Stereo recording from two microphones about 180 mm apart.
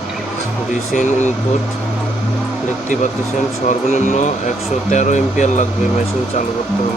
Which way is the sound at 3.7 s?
40° left (ahead or behind).